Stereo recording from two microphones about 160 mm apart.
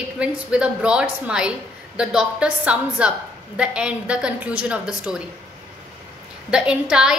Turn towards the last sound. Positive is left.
turn(degrees=-5)  # may be behind; listen again after turning